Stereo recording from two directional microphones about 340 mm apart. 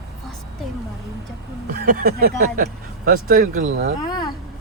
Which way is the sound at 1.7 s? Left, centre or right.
Right.